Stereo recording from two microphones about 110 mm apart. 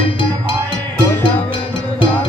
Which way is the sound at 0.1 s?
50° left (ahead or behind).